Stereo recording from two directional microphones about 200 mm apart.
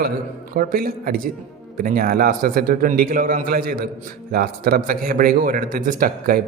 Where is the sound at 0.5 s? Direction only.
45° right (ahead or behind).